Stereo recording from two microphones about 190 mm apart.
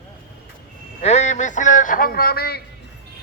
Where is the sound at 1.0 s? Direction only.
35° left (ahead or behind).